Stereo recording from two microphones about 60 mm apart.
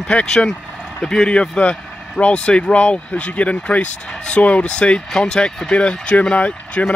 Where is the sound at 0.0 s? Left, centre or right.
Centre.